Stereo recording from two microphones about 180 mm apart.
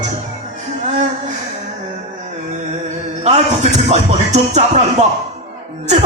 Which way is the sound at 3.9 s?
40° right (ahead or behind).